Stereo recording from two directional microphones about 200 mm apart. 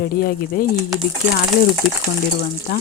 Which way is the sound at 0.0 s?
45° left (ahead or behind).